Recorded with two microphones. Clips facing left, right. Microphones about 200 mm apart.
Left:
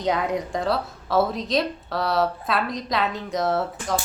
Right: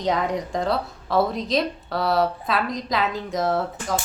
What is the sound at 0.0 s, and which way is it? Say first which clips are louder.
A woman's voice: even; centre (ahead or behind).